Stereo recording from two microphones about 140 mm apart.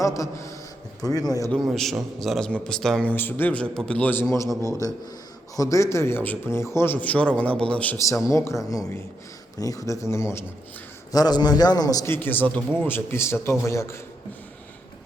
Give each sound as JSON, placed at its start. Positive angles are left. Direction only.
{"t": 0.0, "sound": "a man's voice", "side_deg": 20}
{"t": 1.7, "sound": "a man's voice", "side_deg": 0}
{"t": 5.5, "sound": "a man's voice", "side_deg": 20}
{"t": 7.9, "sound": "a man's voice", "side_deg": 20}